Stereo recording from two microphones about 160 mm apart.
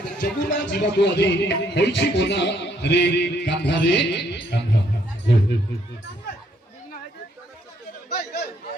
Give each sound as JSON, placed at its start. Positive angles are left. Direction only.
{"t": 0.2, "sound": "music", "side_deg": 65}
{"t": 8.1, "sound": "chatter", "side_deg": 85}